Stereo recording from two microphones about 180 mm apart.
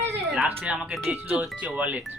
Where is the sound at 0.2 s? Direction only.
Centre (ahead or behind).